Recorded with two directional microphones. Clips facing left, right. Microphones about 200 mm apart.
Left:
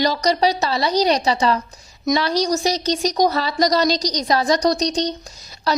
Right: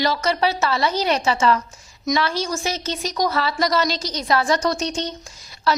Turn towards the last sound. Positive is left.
turn(degrees=40)  # may be behind; listen again after turning